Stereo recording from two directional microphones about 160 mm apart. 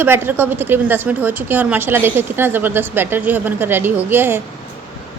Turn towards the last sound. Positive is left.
turn(degrees=-15)  # may be behind; listen again after turning